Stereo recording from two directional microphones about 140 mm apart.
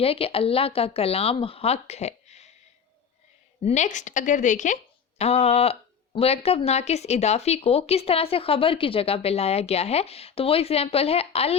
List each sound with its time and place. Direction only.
0.0 s speech: 45° left (ahead or behind)
3.6 s a woman's voice: 55° left (ahead or behind)